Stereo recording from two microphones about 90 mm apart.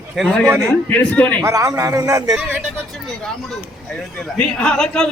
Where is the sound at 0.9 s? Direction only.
15° left (ahead or behind).